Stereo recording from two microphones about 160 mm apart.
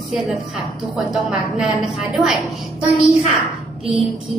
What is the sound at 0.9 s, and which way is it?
A woman's voice, 5° right (ahead or behind).